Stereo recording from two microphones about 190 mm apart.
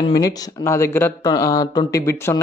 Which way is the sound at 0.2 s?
15° left (ahead or behind).